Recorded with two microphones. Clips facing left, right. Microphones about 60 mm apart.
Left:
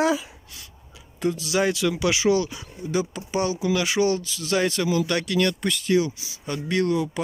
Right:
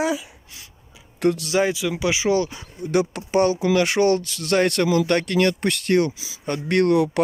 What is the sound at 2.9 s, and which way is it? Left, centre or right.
Speech, right.